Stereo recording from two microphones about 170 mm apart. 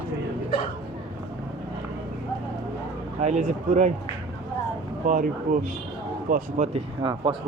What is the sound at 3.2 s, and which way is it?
Speech, 45° right (ahead or behind).